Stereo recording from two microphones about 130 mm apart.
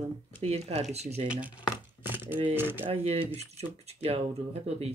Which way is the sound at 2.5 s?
15° right (ahead or behind).